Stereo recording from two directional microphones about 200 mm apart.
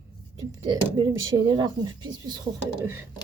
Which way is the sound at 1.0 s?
20° right (ahead or behind).